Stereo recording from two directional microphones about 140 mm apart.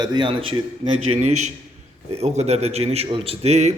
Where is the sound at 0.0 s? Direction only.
35° right (ahead or behind).